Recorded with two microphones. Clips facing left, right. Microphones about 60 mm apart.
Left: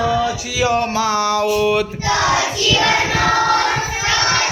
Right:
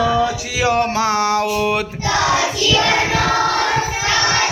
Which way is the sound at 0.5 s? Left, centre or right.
Right.